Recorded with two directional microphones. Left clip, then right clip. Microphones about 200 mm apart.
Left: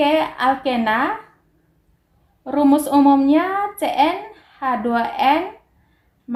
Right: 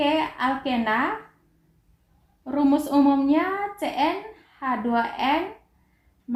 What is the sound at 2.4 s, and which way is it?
A woman's voice, 45° left (ahead or behind).